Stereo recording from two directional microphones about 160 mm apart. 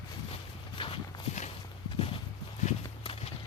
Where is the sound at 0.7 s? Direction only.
35° left (ahead or behind).